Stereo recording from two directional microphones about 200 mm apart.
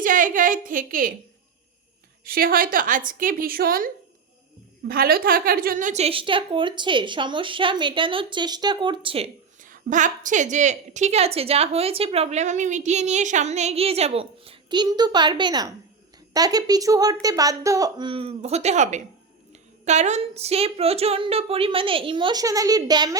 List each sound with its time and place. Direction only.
0.0 s a woman's voice: 40° right (ahead or behind)
2.2 s a woman's voice: 50° right (ahead or behind); by 23.1 s 20° right (ahead or behind)